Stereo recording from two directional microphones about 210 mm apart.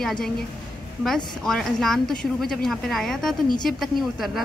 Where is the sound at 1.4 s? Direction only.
Centre (ahead or behind).